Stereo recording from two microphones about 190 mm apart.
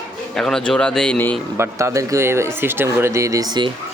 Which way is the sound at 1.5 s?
15° right (ahead or behind).